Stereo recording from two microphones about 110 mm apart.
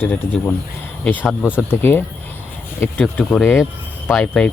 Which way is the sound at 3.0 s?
10° left (ahead or behind).